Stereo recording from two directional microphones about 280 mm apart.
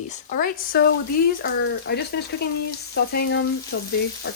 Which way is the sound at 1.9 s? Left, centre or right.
Left.